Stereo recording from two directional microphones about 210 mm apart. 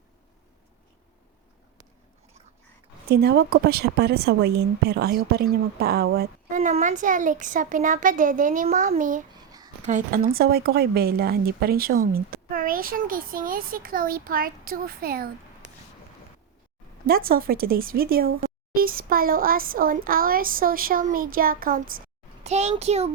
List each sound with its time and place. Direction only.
3.1 s a woman's voice: 50° right (ahead or behind)
6.1 s a woman's voice: 40° right (ahead or behind)
9.3 s a sound: 20° right (ahead or behind)
9.8 s a woman's voice: 40° right (ahead or behind)
17.1 s a woman's voice: 45° right (ahead or behind)
22.4 s a woman's voice: 30° right (ahead or behind)